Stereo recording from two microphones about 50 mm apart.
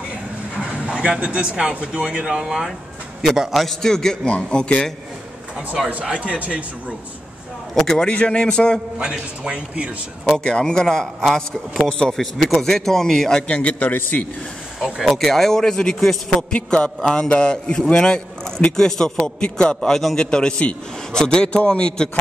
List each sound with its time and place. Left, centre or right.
0.8 s speech: centre
3.2 s a man's voice: centre; by 4.8 s left
6.0 s a man's voice: centre
7.7 s a man's voice: centre
8.9 s a man's voice: centre
10.2 s a man's voice: centre
13.4 s a man's voice: left
15.0 s a man's voice: centre
16.5 s a man's voice: centre
19.9 s a man's voice: centre
20.2 s a man's voice: centre